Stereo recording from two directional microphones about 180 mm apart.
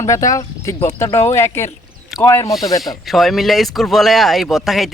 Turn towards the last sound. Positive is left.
turn(degrees=0)  # may be behind; listen again after turning